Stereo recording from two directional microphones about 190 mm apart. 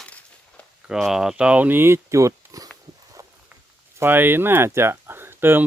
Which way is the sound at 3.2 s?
15° right (ahead or behind).